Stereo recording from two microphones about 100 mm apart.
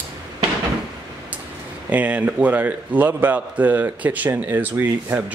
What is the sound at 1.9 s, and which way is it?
A man's voice, 15° right (ahead or behind).